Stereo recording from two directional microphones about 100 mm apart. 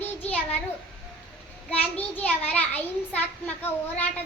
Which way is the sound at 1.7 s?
15° left (ahead or behind).